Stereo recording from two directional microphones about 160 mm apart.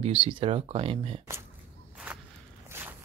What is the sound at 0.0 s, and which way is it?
Speech, 35° right (ahead or behind).